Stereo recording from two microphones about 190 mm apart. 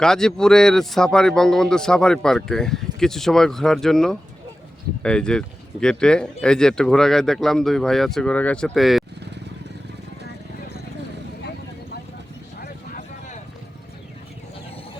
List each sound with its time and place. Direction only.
0.0 s speech: 5° left (ahead or behind)
12.5 s vehicle: 50° left (ahead or behind)